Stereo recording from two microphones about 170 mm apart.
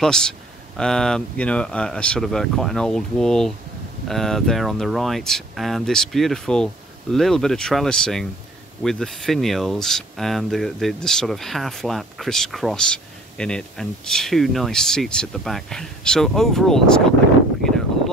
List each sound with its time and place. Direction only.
0.0 s speech: 5° left (ahead or behind)